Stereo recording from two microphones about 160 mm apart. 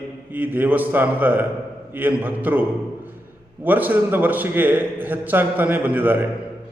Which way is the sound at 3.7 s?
10° right (ahead or behind).